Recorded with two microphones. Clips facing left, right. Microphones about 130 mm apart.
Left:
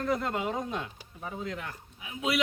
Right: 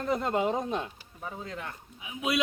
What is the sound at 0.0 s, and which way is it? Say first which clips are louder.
A man's voice: right 2 dB; 25° right (ahead or behind).